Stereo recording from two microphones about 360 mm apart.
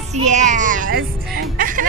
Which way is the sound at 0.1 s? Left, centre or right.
Centre.